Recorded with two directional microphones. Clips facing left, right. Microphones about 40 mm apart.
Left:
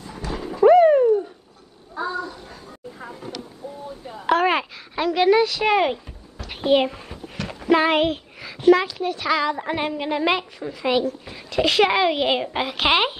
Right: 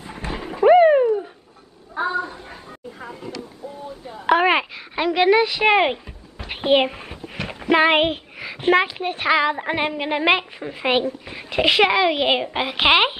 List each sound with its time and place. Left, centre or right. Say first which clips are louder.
0.0 s a sound: even; right
2.0 s child singing: right 4 dB; right
4.1 s a sound: right 2 dB; centre
8.6 s a woman's voice: left 2 dB; right
11.9 s a child's voice: right 1 dB; centre
12.2 s a child's voice: right 1 dB; centre